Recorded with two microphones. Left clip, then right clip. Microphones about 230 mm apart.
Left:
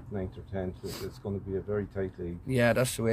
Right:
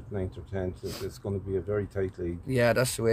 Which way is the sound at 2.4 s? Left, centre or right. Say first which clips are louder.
Right 1 dB; centre.